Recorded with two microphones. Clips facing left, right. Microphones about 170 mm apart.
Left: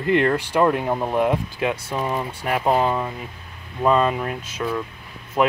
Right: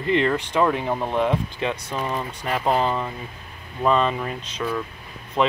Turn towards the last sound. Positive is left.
turn(degrees=10)  # may be behind; listen again after turning